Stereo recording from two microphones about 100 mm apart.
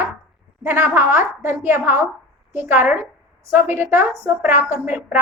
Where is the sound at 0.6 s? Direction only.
25° right (ahead or behind).